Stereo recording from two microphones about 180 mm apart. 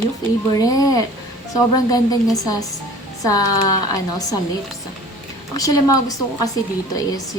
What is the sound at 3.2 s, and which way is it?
Speech, 20° left (ahead or behind).